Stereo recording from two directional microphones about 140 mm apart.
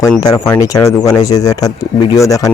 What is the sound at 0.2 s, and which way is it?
Speech, 25° left (ahead or behind).